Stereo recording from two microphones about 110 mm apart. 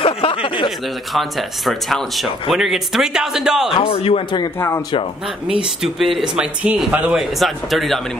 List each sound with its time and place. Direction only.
0.0 s a sound: 55° left (ahead or behind)
0.7 s speech: centre (ahead or behind)
3.7 s speech: 60° left (ahead or behind)
4.6 s speech: 25° left (ahead or behind)
5.6 s speech: centre (ahead or behind)
7.2 s speech: centre (ahead or behind)